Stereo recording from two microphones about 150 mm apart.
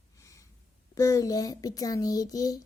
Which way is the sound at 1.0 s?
20° left (ahead or behind).